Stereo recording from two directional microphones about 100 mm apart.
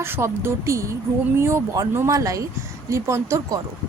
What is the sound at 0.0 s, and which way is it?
A woman's voice, 25° right (ahead or behind).